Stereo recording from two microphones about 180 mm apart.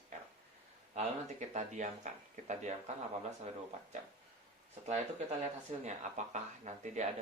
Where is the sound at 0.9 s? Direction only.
40° right (ahead or behind).